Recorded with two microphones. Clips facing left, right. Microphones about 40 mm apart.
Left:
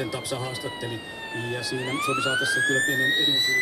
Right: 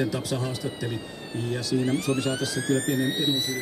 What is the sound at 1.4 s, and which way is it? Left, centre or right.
Speech, left.